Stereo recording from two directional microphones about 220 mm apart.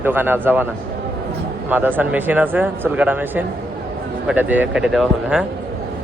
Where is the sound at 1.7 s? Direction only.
10° right (ahead or behind).